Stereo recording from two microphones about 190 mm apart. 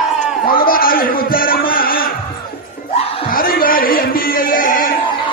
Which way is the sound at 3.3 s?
50° left (ahead or behind).